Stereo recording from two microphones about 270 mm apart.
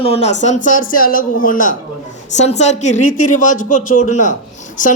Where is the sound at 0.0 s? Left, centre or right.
Left.